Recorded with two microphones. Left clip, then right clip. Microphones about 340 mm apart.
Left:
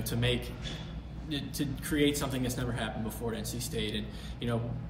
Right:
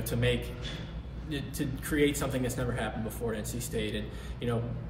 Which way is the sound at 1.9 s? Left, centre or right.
Centre.